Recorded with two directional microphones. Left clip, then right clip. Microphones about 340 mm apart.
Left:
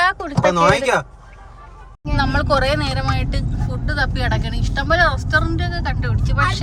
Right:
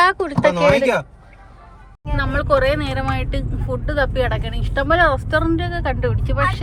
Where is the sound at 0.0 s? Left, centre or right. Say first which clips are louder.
Right 2 dB; centre.